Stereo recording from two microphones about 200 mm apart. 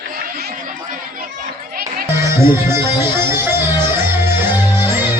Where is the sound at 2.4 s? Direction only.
15° right (ahead or behind).